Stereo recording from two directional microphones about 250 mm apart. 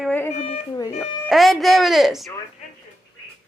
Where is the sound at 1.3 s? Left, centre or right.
Centre.